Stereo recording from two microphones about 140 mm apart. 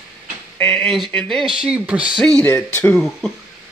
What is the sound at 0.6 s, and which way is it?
Speech, centre (ahead or behind).